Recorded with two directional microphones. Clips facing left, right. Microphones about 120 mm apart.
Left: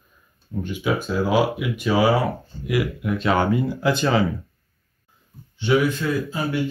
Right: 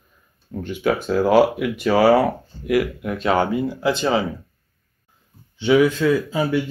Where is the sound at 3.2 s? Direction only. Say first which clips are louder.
Right 1 dB; 30° right (ahead or behind).